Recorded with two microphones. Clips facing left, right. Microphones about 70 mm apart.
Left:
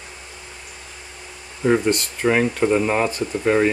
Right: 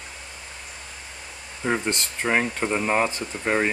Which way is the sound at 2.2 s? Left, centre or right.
Centre.